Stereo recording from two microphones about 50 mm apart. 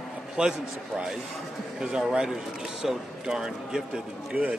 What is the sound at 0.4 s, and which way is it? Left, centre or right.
Speech, centre.